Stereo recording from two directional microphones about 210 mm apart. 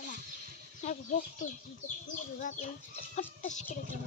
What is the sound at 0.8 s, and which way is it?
Chicken, 35° left (ahead or behind).